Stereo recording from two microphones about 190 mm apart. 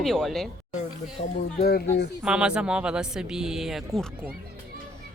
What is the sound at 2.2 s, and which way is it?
Speech, 5° right (ahead or behind).